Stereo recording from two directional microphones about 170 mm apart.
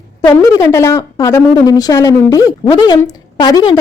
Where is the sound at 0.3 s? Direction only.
20° left (ahead or behind).